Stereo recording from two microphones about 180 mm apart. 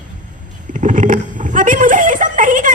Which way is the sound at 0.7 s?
45° right (ahead or behind).